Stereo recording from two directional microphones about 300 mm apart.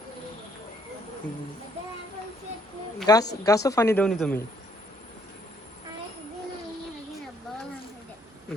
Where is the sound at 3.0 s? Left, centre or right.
Centre.